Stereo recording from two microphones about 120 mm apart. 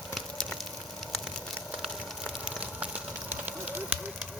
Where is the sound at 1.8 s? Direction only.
Centre (ahead or behind).